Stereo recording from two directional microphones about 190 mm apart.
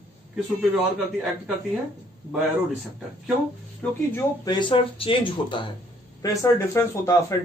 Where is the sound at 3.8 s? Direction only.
15° left (ahead or behind).